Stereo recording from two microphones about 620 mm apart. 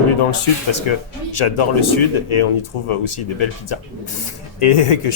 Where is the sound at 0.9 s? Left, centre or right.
Left.